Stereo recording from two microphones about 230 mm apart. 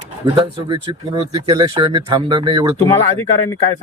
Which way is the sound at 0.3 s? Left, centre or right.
Right.